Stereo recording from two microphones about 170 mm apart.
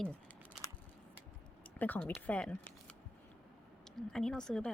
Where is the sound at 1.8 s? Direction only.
10° left (ahead or behind).